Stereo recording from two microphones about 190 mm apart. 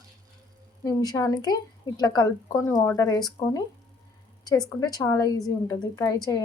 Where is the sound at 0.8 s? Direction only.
20° left (ahead or behind).